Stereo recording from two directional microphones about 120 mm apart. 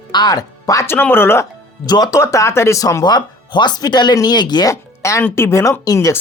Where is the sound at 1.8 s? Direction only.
35° left (ahead or behind).